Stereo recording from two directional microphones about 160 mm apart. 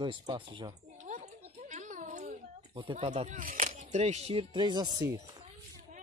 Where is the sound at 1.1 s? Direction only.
50° right (ahead or behind).